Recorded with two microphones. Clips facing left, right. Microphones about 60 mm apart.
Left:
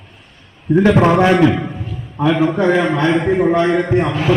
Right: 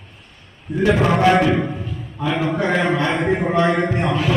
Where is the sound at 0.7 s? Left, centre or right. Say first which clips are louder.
Left 6 dB; left.